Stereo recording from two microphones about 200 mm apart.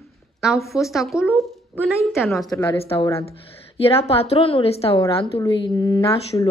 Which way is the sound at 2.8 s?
30° left (ahead or behind).